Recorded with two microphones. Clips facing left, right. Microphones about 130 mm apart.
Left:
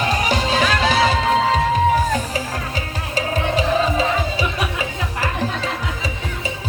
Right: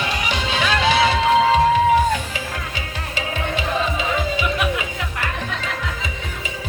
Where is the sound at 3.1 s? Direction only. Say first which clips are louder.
Left 5 dB; 40° left (ahead or behind).